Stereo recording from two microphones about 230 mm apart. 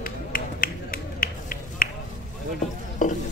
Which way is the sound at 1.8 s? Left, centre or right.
Left.